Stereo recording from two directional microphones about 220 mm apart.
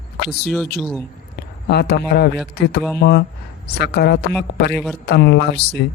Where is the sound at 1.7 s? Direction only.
45° left (ahead or behind).